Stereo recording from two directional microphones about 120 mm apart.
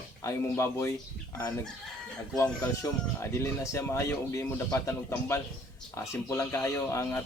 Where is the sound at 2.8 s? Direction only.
25° left (ahead or behind).